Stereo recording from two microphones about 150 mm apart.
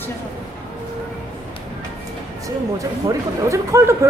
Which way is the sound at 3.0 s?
20° right (ahead or behind).